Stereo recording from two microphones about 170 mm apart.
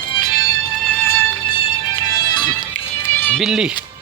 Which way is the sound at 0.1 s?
25° left (ahead or behind).